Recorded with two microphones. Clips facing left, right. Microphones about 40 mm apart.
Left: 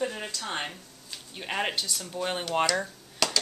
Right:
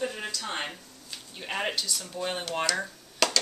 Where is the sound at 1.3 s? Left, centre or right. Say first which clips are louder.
Left 1 dB; centre.